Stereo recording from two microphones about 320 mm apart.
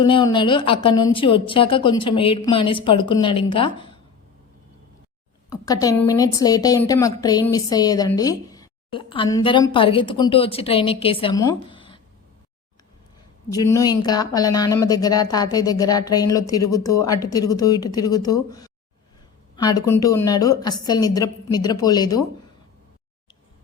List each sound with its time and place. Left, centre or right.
0.0 s a woman's voice: centre
5.5 s a woman's voice: centre
13.5 s a woman's voice: centre